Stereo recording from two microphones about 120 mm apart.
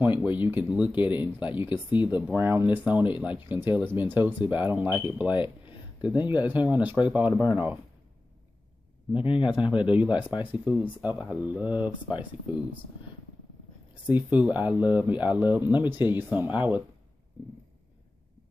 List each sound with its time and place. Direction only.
0.0 s speech: 15° right (ahead or behind)
1.7 s speech: 40° left (ahead or behind)
2.0 s speech: 15° right (ahead or behind)
9.2 s a man's voice: 45° left (ahead or behind)
9.5 s speech: 10° right (ahead or behind)
14.0 s speech: 10° right (ahead or behind)